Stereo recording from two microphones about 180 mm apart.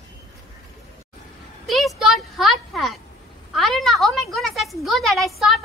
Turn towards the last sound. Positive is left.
turn(degrees=0)  # may be behind; listen again after turning